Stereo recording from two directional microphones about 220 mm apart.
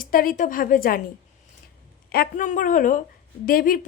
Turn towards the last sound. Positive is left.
turn(degrees=40)  # may be behind; listen again after turning